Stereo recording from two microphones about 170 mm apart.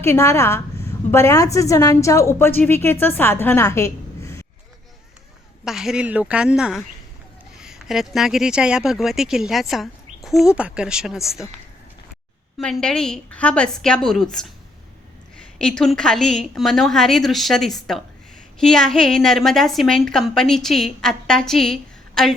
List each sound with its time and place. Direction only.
0.0 s a woman's voice: 15° left (ahead or behind)
5.6 s speech: 5° right (ahead or behind)
12.5 s speech: centre (ahead or behind)
15.5 s speech: 5° left (ahead or behind)